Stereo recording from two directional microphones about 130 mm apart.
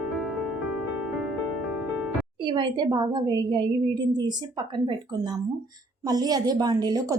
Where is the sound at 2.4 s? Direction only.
40° right (ahead or behind).